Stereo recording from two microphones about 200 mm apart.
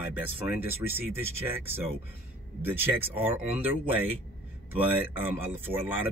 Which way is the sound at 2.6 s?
10° right (ahead or behind).